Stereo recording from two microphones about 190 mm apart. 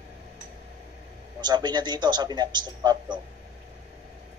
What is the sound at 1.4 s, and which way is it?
A man's voice, 25° right (ahead or behind).